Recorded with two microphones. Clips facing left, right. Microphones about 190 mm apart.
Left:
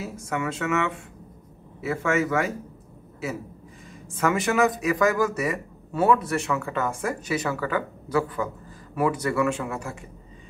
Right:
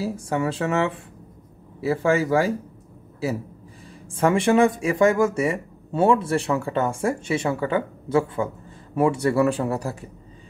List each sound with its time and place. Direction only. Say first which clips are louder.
0.0 s speech: right 5 dB; 30° right (ahead or behind)
4.2 s speech: right 4 dB; 30° right (ahead or behind)